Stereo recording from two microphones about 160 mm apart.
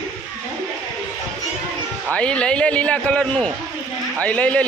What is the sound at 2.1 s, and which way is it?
A man's voice, 5° left (ahead or behind).